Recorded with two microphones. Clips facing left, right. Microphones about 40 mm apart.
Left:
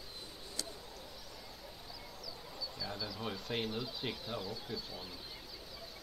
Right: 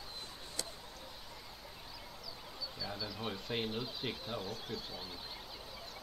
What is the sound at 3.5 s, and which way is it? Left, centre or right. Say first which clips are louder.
Speech: even; centre.